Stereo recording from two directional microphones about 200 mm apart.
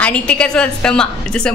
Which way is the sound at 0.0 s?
5° left (ahead or behind).